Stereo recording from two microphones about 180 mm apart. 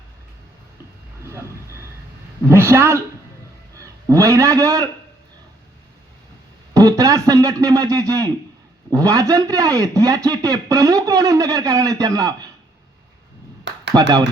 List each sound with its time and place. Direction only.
2.5 s a man's voice: 15° right (ahead or behind)
4.1 s a man's voice: 15° right (ahead or behind)
6.7 s speech: 20° right (ahead or behind)
13.7 s a sound: 80° right